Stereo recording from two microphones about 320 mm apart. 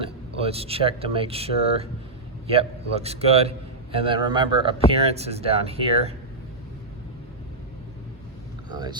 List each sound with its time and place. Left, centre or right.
0.0 s a man's voice: centre
8.7 s speech: centre